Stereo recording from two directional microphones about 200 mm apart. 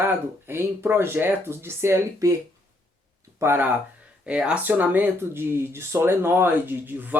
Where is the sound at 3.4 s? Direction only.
10° right (ahead or behind).